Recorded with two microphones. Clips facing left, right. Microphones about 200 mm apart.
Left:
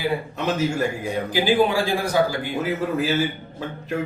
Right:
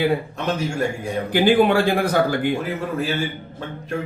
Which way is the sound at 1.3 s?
60° right (ahead or behind).